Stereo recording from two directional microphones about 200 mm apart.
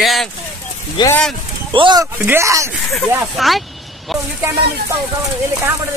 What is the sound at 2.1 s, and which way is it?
Speech, 10° right (ahead or behind).